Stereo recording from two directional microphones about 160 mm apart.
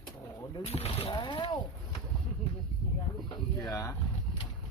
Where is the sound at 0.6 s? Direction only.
40° left (ahead or behind).